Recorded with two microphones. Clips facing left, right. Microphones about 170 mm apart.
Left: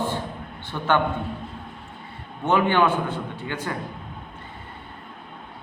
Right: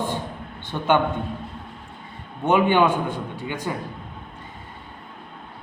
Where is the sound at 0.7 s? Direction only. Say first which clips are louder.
Right 2 dB; 20° right (ahead or behind).